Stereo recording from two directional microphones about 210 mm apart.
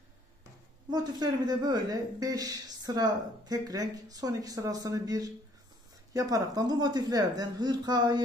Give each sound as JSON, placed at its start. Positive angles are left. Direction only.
{"t": 0.8, "sound": "a woman's voice", "side_deg": -20}